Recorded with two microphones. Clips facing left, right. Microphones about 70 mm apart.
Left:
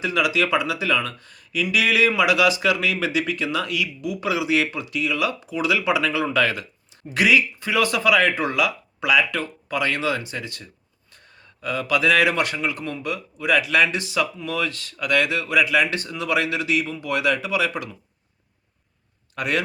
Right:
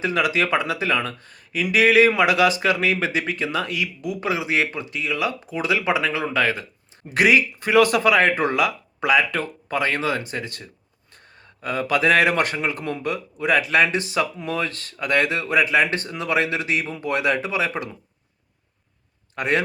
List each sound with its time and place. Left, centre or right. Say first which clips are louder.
0.0 s speech: even; right
7.1 s speech: right 1 dB; right
11.6 s speech: right 1 dB; right
19.4 s a man's voice: right 2 dB; right